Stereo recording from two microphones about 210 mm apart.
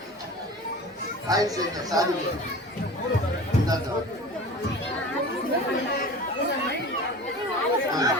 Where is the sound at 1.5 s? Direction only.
20° right (ahead or behind).